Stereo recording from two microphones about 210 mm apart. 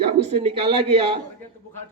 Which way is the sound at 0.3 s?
30° right (ahead or behind).